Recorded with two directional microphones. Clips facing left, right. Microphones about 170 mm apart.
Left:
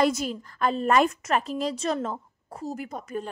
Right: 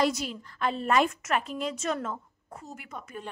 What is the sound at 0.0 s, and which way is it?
A woman's voice, 45° left (ahead or behind).